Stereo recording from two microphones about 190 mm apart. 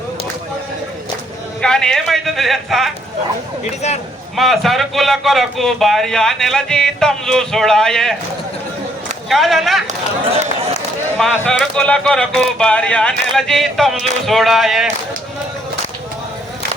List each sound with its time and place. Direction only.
1.6 s speech: 5° left (ahead or behind)
3.8 s speech: 35° left (ahead or behind)
4.4 s speech: centre (ahead or behind)
9.3 s speech: centre (ahead or behind)
11.2 s speech: 5° left (ahead or behind)